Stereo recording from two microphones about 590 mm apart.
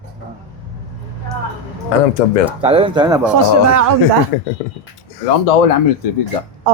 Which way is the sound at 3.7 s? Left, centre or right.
Right.